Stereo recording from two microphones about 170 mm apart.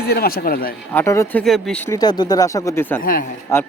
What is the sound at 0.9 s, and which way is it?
Speech, 15° left (ahead or behind).